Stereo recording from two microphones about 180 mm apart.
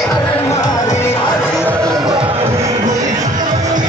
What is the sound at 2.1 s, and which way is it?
Music, 30° right (ahead or behind).